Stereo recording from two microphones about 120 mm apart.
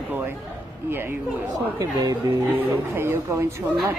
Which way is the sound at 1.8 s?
30° right (ahead or behind).